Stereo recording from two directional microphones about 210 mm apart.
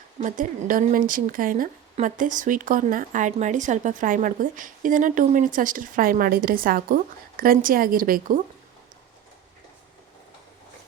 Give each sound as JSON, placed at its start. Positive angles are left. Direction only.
{"t": 0.2, "sound": "a woman's voice", "side_deg": -40}